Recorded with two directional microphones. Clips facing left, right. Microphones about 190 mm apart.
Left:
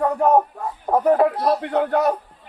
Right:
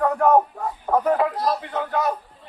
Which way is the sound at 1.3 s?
65° left (ahead or behind).